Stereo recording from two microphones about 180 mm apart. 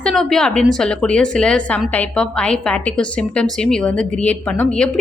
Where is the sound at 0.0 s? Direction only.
5° left (ahead or behind).